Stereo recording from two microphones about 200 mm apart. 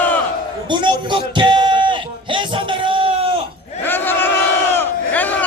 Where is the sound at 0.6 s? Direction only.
25° right (ahead or behind).